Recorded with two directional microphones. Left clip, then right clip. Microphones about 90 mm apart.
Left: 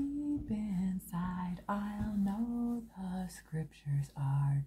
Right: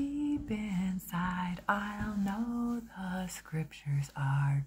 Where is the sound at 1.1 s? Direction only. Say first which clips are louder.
Right 10 dB; 25° left (ahead or behind).